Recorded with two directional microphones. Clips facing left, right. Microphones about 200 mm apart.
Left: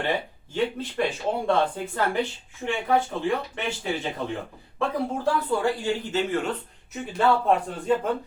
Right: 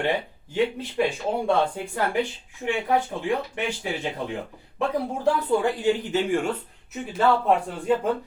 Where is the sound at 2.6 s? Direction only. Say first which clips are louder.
Even; 15° right (ahead or behind).